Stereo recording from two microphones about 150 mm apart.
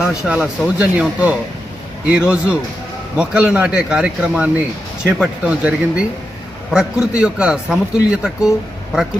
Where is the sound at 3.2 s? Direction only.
5° right (ahead or behind).